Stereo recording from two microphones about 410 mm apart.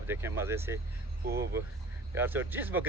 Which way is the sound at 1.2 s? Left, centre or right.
Right.